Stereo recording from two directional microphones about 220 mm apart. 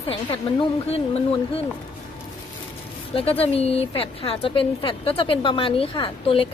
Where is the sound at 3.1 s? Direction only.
25° left (ahead or behind).